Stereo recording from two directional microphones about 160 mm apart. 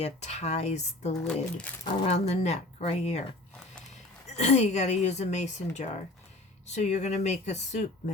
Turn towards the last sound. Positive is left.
turn(degrees=45)  # may be behind; listen again after turning